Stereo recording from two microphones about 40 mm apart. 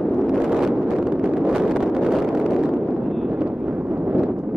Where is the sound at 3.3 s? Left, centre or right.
Right.